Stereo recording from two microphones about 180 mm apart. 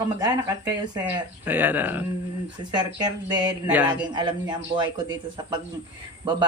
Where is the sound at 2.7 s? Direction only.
25° right (ahead or behind).